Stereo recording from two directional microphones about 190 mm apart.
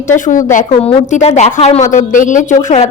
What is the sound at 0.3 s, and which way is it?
A woman's voice, 40° left (ahead or behind).